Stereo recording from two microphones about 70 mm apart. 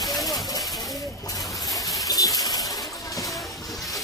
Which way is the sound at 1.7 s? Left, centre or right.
Left.